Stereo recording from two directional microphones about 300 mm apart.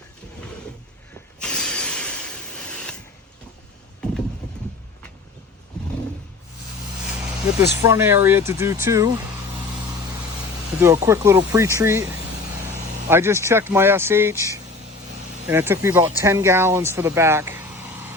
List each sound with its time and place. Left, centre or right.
1.4 s a sound: centre
7.6 s speech: centre
10.8 s speech: centre